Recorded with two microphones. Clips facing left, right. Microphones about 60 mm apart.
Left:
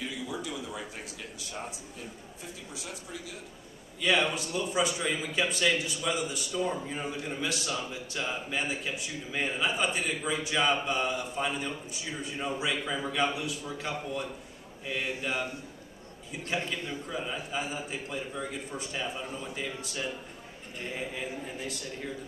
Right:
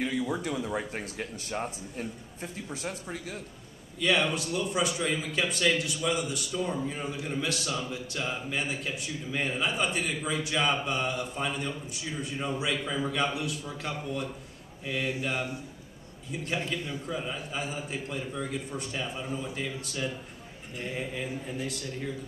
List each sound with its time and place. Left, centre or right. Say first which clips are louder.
0.0 s speech: right 6 dB; right
4.0 s speech: right 1 dB; centre
16.3 s speech: right 1 dB; centre